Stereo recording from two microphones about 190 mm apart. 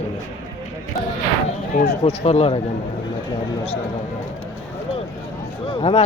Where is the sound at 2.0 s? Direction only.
35° left (ahead or behind).